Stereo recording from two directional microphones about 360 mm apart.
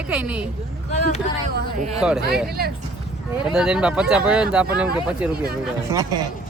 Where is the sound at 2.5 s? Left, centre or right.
Right.